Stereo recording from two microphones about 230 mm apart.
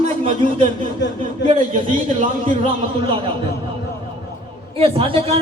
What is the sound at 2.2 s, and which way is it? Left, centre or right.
Speech, right.